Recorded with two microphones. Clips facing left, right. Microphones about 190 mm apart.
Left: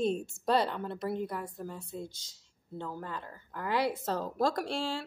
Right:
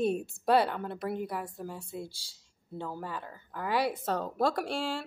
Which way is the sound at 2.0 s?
20° left (ahead or behind).